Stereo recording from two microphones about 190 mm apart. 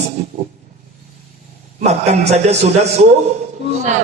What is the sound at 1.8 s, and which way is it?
A man's voice, 35° right (ahead or behind).